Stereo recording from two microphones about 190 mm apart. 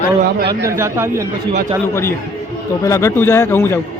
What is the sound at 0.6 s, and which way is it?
Speech, 15° right (ahead or behind).